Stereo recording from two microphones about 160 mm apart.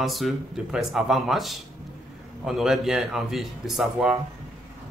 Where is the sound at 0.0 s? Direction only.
Centre (ahead or behind).